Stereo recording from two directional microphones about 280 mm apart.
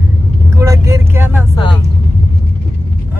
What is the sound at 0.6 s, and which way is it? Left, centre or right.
Vehicle, centre.